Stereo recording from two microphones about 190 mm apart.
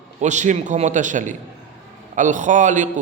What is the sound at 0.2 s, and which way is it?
A man's voice, 40° right (ahead or behind).